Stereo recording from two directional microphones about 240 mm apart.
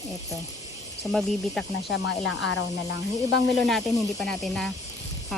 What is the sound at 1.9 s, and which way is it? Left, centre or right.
Speech, left.